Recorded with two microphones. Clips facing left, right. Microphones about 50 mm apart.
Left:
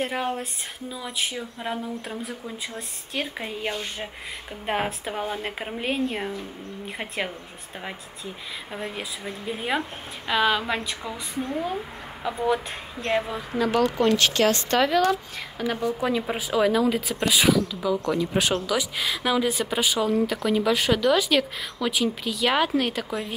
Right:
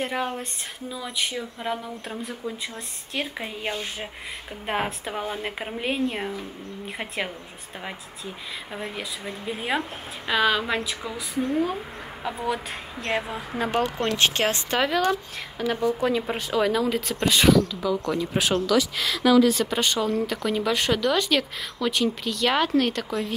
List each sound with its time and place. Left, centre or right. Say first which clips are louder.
0.0 s speech: left 1 dB; centre
8.7 s speech: left 1 dB; centre
13.6 s speech: left 3 dB; right
14.7 s speech: left 2 dB; centre
18.7 s speech: right 3 dB; centre